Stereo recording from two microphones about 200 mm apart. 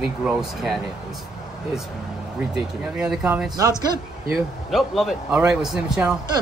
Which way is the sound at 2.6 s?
5° right (ahead or behind).